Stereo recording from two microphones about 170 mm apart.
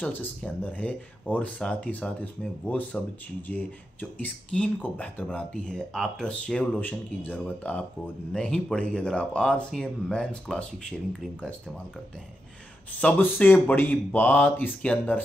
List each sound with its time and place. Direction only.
0.0 s speech: 10° left (ahead or behind)
13.0 s speech: 10° left (ahead or behind)